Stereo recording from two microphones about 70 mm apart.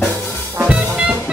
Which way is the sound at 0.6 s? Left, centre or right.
Centre.